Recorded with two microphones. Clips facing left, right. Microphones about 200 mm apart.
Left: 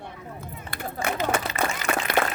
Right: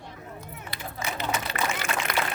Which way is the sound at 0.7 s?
50° left (ahead or behind).